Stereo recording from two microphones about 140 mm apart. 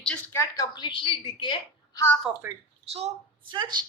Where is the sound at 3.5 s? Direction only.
30° right (ahead or behind).